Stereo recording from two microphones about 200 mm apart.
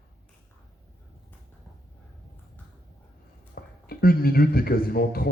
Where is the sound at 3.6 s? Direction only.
50° left (ahead or behind).